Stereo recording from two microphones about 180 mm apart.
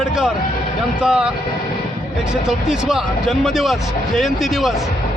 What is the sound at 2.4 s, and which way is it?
Speech, 5° right (ahead or behind).